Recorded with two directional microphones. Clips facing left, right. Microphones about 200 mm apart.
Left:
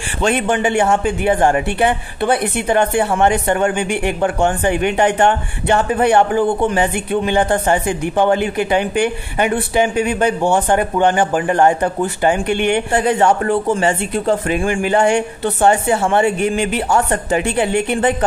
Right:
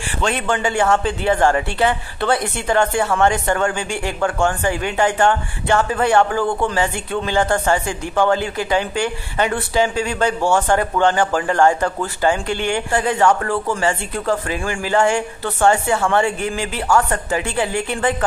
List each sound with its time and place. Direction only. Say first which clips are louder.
0.2 s a woman's voice: left 4 dB; 15° left (ahead or behind)